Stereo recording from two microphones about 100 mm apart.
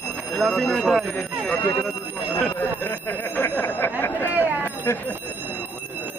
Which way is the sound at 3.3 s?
20° left (ahead or behind).